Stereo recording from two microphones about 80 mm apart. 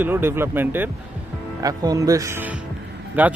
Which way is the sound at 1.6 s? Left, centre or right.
Right.